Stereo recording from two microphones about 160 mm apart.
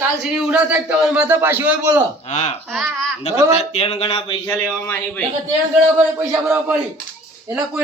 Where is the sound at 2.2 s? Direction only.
45° left (ahead or behind).